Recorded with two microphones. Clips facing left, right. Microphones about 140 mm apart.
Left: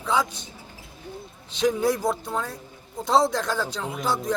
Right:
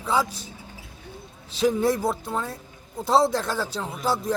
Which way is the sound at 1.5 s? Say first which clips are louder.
Right 1 dB; 5° right (ahead or behind).